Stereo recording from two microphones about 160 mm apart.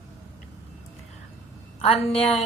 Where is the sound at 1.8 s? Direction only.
40° left (ahead or behind).